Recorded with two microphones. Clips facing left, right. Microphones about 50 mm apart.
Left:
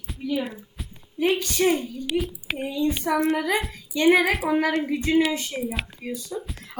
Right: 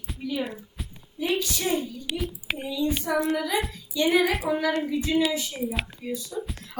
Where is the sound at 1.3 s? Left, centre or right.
Left.